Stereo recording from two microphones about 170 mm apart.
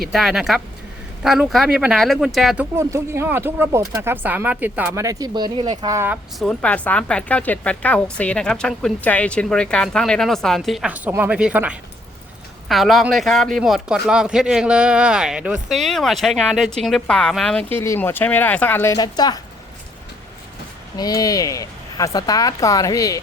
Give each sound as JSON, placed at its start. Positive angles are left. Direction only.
{"t": 0.1, "sound": "speech", "side_deg": 0}
{"t": 2.7, "sound": "speech", "side_deg": -15}
{"t": 5.0, "sound": "speech", "side_deg": -25}
{"t": 6.4, "sound": "a woman's voice", "side_deg": 5}
{"t": 18.9, "sound": "speech", "side_deg": 25}
{"t": 20.9, "sound": "speech", "side_deg": 20}